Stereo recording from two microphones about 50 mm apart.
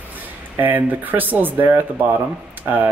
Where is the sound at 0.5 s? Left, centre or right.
Right.